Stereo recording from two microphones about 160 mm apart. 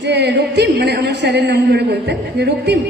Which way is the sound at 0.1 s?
90° right.